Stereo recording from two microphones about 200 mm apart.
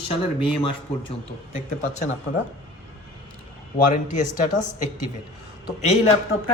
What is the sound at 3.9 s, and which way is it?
Speech, 40° left (ahead or behind).